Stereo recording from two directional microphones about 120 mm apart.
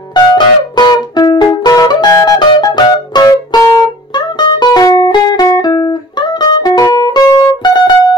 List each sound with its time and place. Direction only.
0.1 s music: 40° left (ahead or behind)